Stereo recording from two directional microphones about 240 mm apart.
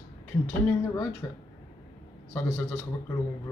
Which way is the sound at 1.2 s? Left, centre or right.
Centre.